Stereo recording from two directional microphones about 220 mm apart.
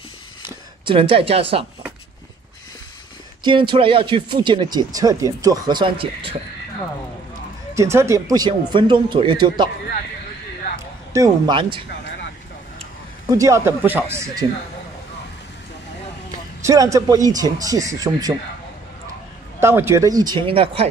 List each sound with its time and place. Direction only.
0.8 s speech: 25° right (ahead or behind)
3.4 s speech: 20° right (ahead or behind)
7.7 s speech: 10° right (ahead or behind)
10.8 s speech: 15° right (ahead or behind)
13.3 s speech: 15° right (ahead or behind)
16.6 s speech: 15° right (ahead or behind)
19.6 s speech: 10° right (ahead or behind)